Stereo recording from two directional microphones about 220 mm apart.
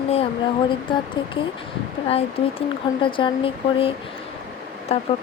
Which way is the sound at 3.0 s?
20° left (ahead or behind).